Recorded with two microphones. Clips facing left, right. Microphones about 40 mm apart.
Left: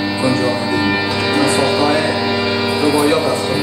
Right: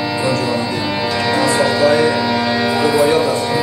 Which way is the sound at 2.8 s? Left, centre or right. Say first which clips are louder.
Even; left.